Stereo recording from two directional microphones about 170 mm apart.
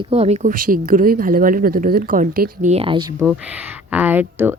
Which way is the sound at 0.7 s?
55° right (ahead or behind).